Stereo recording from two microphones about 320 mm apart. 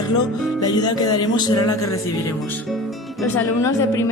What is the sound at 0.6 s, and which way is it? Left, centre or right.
Speech, centre.